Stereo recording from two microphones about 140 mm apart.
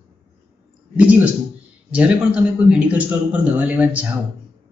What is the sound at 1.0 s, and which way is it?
Speech, 10° right (ahead or behind).